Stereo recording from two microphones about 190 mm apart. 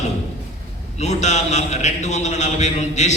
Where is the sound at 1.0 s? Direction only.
35° left (ahead or behind).